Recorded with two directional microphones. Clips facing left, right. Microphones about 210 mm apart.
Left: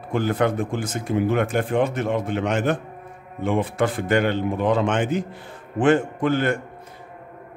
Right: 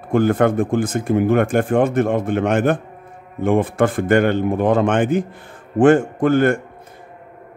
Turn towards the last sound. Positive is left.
turn(degrees=-50)  # may be behind; listen again after turning